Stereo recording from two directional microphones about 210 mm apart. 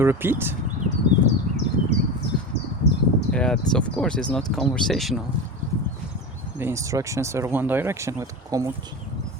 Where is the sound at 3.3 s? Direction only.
5° left (ahead or behind).